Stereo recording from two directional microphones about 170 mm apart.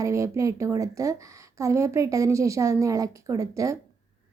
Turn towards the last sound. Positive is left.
turn(degrees=-20)  # may be behind; listen again after turning